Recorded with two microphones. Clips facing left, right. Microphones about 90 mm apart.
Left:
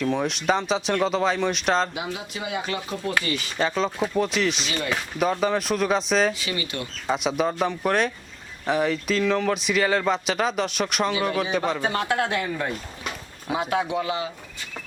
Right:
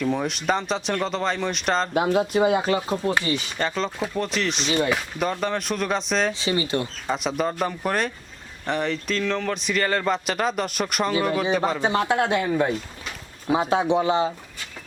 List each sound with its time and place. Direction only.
0.0 s speech: centre (ahead or behind)
1.9 s speech: 45° right (ahead or behind); by 3.3 s 25° right (ahead or behind)
3.6 s speech: 5° left (ahead or behind)
6.3 s speech: 30° right (ahead or behind)
7.1 s speech: centre (ahead or behind)
11.8 s speech: 20° right (ahead or behind)